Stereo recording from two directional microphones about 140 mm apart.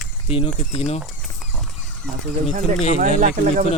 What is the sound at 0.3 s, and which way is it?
Speech, 40° left (ahead or behind).